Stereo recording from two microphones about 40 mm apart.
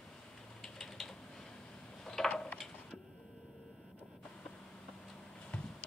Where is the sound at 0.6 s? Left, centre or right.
Centre.